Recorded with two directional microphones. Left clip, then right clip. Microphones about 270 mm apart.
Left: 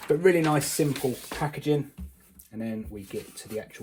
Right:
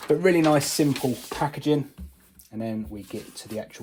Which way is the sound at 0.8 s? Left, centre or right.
Right.